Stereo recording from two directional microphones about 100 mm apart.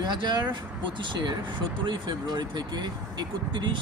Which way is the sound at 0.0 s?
45° right (ahead or behind).